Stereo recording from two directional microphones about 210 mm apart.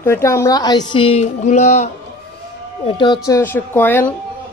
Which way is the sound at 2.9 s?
20° left (ahead or behind).